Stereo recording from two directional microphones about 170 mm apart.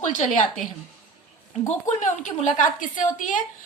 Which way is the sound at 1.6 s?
45° left (ahead or behind).